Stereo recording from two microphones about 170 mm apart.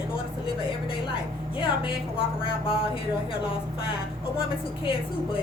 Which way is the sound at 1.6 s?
30° left (ahead or behind).